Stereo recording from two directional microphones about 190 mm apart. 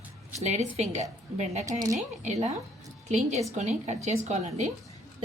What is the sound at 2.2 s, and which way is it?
Speech, 35° right (ahead or behind).